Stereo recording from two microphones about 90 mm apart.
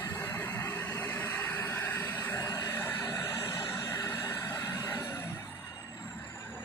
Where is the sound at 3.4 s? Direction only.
55° left (ahead or behind).